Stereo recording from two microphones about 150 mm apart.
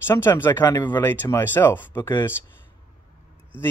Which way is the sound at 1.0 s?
15° left (ahead or behind).